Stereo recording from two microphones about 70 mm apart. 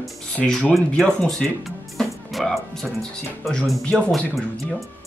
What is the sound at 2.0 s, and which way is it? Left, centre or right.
Music, centre.